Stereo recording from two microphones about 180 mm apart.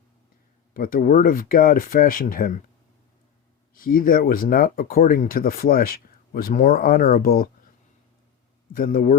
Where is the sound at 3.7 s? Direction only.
55° left (ahead or behind).